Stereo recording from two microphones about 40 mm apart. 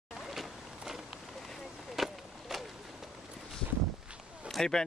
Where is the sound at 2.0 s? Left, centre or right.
Centre.